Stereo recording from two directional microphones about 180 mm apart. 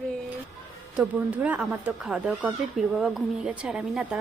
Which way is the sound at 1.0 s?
10° right (ahead or behind).